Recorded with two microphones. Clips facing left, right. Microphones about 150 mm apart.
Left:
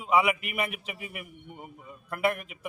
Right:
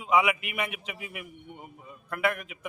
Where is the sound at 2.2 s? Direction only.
35° left (ahead or behind).